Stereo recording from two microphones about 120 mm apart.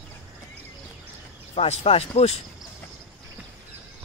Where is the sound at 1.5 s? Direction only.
60° left (ahead or behind).